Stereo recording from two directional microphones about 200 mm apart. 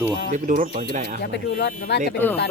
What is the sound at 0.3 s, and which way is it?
Speech, 40° right (ahead or behind).